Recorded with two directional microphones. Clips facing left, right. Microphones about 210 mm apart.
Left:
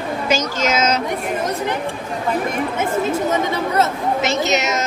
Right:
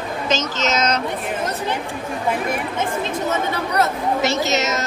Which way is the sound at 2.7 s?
10° left (ahead or behind).